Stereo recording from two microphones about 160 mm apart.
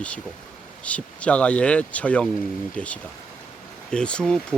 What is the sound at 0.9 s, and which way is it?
Speech, 10° left (ahead or behind).